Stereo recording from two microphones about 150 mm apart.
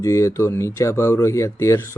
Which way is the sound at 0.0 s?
20° left (ahead or behind).